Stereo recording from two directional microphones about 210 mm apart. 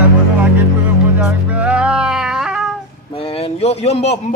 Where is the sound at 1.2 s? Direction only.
5° right (ahead or behind).